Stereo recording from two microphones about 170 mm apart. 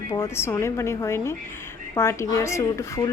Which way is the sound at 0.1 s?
15° left (ahead or behind).